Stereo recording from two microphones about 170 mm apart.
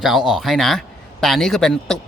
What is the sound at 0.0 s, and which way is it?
A man's voice, centre (ahead or behind).